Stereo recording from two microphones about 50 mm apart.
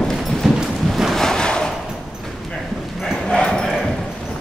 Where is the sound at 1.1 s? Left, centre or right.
Centre.